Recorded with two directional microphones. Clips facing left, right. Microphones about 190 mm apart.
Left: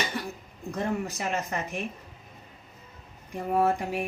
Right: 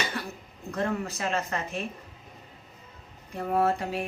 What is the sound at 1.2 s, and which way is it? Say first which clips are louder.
Speech: right 1 dB; 15° left (ahead or behind).